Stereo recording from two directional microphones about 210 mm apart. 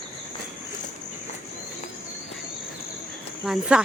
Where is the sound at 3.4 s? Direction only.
5° right (ahead or behind).